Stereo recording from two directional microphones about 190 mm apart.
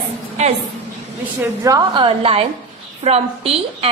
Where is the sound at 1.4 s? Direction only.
20° right (ahead or behind).